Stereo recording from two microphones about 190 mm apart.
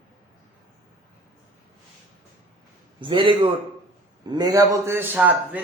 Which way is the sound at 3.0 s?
25° right (ahead or behind).